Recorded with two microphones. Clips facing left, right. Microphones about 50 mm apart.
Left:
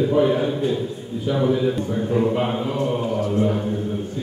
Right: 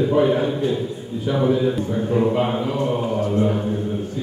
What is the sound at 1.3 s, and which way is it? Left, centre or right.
A man's voice, centre.